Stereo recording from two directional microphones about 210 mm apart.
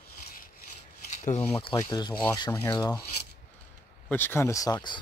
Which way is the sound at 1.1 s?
35° left (ahead or behind).